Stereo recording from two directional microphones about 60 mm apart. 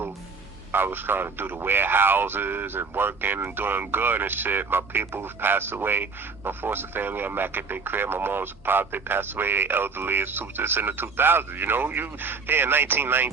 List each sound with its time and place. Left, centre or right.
0.7 s speech: right